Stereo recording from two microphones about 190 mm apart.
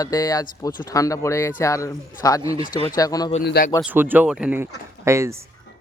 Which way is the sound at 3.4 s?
60° left (ahead or behind).